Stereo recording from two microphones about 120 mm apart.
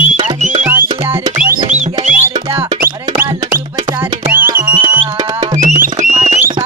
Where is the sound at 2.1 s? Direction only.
15° right (ahead or behind).